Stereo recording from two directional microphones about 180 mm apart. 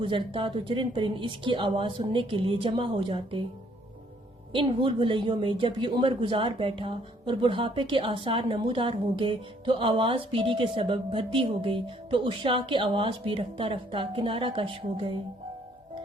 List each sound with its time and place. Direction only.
0.0 s a woman's voice: 30° right (ahead or behind)
4.5 s a woman's voice: 30° right (ahead or behind)